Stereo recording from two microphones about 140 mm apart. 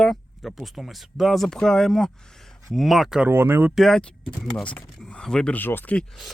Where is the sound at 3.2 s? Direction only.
15° right (ahead or behind).